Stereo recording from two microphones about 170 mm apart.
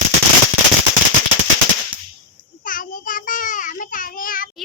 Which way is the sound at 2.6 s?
55° left (ahead or behind).